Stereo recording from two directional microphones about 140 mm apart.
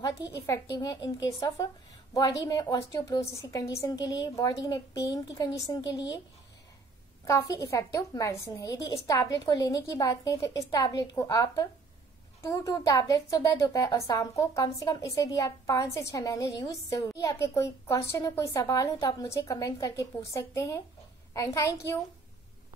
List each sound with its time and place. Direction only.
0.5 s a woman's voice: 25° left (ahead or behind)
7.2 s a woman's voice: 25° left (ahead or behind)